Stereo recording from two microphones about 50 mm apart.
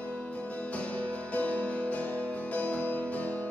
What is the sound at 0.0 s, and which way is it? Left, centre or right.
Music, left.